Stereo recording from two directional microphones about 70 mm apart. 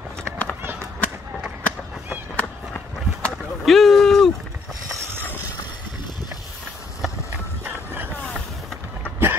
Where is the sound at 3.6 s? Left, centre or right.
Centre.